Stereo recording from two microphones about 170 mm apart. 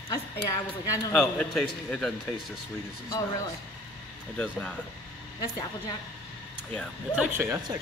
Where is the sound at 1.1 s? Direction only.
5° left (ahead or behind).